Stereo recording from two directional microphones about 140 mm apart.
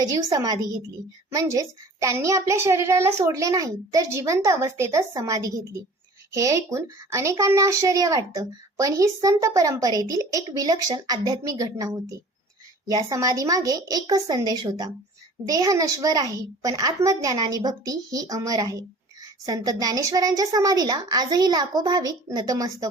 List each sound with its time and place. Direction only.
0.0 s a woman's voice: 25° right (ahead or behind)